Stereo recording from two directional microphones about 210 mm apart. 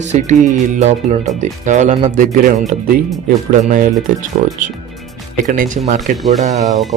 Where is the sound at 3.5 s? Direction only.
40° right (ahead or behind).